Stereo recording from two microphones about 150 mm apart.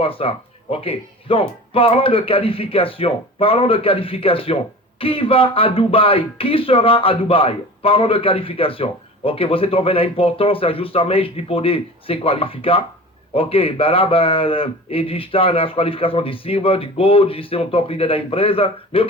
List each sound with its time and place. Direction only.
0.0 s speech: 40° left (ahead or behind)